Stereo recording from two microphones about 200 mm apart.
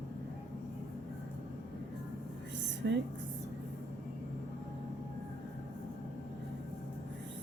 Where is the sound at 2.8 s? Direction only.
60° right (ahead or behind).